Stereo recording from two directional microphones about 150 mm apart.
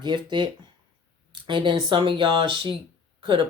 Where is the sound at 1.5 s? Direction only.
35° right (ahead or behind).